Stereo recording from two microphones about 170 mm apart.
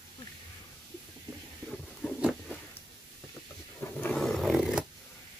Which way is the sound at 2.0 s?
Centre (ahead or behind).